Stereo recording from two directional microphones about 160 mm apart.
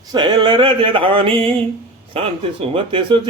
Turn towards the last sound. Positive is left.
turn(degrees=-30)  # may be behind; listen again after turning